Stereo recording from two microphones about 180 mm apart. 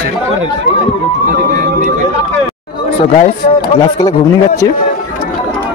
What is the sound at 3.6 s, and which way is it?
Speech, 20° left (ahead or behind).